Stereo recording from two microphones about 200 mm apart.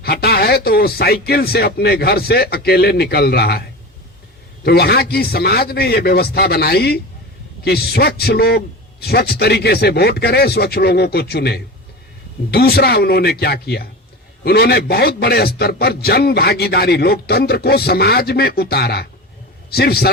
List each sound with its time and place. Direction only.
0.0 s a man's voice: 50° left (ahead or behind)
4.6 s a man's voice: 50° left (ahead or behind)